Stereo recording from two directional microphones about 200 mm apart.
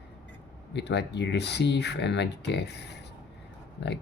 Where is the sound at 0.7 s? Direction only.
60° left (ahead or behind).